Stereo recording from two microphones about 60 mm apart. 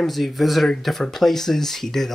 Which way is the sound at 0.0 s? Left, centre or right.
Centre.